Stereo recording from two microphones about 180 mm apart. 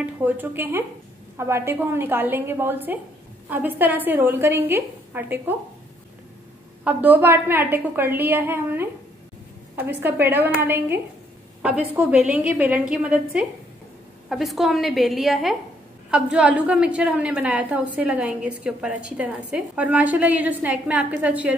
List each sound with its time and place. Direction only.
0.0 s a woman's voice: 10° right (ahead or behind)
6.8 s a woman's voice: 10° right (ahead or behind)